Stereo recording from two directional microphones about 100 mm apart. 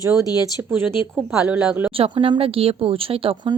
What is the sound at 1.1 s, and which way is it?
Speech, 10° right (ahead or behind).